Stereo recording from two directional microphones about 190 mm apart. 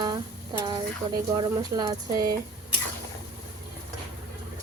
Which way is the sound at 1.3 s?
20° right (ahead or behind).